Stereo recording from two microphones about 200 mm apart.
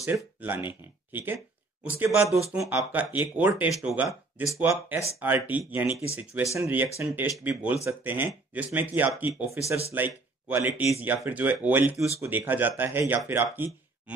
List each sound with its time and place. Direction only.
0.0 s speech: 10° right (ahead or behind)